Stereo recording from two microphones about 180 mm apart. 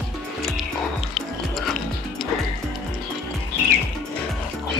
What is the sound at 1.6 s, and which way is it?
Music, centre (ahead or behind).